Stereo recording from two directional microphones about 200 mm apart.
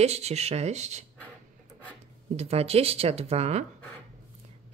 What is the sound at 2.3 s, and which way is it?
Speech, 30° right (ahead or behind).